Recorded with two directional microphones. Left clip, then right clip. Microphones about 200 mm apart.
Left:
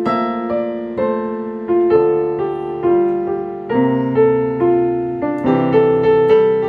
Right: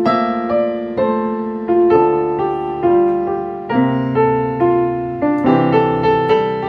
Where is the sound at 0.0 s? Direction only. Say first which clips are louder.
Right 2 dB; 15° right (ahead or behind).